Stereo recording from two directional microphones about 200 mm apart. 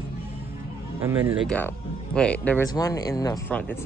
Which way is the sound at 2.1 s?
5° left (ahead or behind).